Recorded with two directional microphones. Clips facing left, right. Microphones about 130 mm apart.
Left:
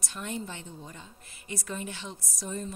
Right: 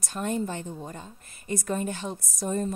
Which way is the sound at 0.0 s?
45° right (ahead or behind).